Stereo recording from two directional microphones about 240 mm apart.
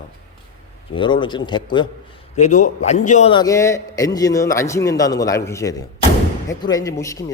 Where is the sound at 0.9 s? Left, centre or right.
Centre.